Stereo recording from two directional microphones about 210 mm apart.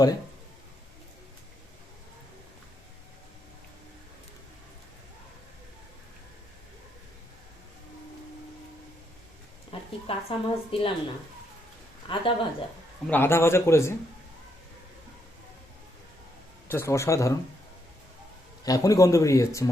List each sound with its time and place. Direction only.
9.7 s a sound: 25° left (ahead or behind)
10.1 s a woman's voice: 25° left (ahead or behind)
12.0 s a woman's voice: 25° left (ahead or behind)
13.1 s speech: 10° left (ahead or behind)
16.6 s speech: 10° left (ahead or behind)
18.6 s speech: 15° left (ahead or behind)